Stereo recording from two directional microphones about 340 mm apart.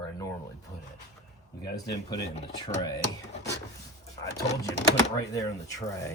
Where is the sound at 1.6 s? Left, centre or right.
Centre.